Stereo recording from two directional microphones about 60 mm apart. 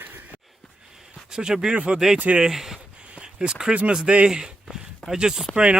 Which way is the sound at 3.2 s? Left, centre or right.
Centre.